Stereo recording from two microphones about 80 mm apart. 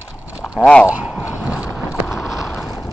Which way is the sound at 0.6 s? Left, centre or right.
Centre.